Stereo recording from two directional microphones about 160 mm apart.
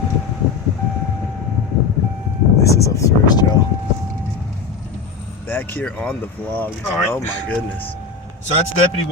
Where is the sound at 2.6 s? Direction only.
20° left (ahead or behind).